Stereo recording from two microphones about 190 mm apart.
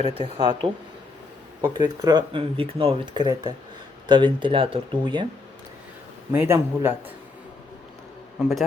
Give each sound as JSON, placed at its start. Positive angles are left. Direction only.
{"t": 0.0, "sound": "speech", "side_deg": -30}
{"t": 1.7, "sound": "speech", "side_deg": -20}
{"t": 6.3, "sound": "a man's voice", "side_deg": -10}